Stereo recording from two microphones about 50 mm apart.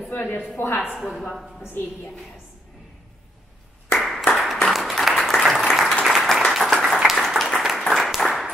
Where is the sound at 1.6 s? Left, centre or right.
Left.